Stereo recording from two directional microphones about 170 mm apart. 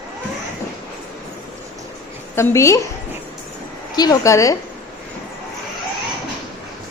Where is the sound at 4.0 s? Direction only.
20° left (ahead or behind).